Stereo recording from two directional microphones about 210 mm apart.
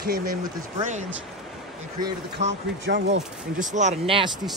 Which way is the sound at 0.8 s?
35° right (ahead or behind).